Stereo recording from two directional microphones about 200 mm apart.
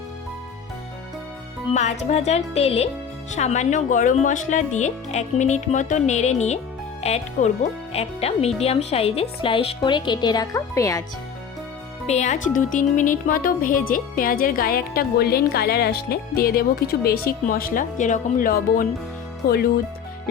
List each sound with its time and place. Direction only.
1.7 s speech: 35° left (ahead or behind); by 11.0 s 15° left (ahead or behind)
12.0 s speech: 35° left (ahead or behind)